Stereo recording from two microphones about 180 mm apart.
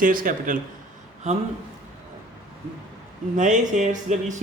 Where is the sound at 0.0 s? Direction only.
50° right (ahead or behind).